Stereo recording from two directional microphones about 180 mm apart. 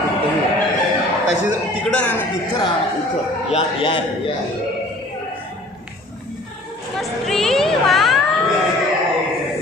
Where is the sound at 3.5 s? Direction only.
30° left (ahead or behind).